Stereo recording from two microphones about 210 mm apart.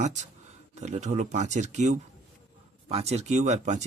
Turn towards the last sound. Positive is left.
turn(degrees=-35)  # may be behind; listen again after turning